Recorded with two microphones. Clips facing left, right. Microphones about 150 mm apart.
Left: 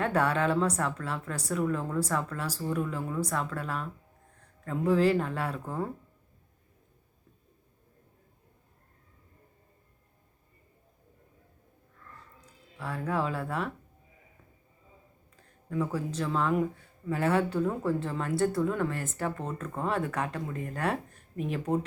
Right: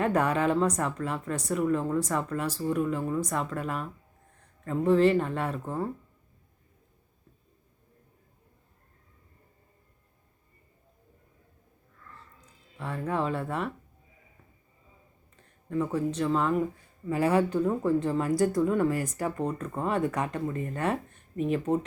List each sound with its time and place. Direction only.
0.0 s speech: centre (ahead or behind)
12.8 s speech: centre (ahead or behind)
15.7 s speech: centre (ahead or behind)